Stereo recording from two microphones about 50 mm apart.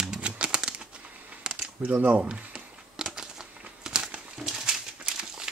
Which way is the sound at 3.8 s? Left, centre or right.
Centre.